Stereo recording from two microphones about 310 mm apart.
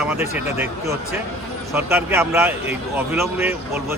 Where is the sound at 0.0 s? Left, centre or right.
Centre.